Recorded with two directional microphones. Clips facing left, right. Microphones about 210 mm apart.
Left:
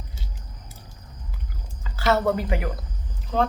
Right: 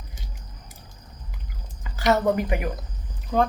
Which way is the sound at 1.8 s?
15° right (ahead or behind).